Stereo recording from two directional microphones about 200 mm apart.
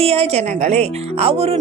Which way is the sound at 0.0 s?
30° right (ahead or behind).